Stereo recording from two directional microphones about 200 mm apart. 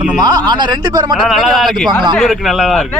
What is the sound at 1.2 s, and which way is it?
A man's voice, centre (ahead or behind).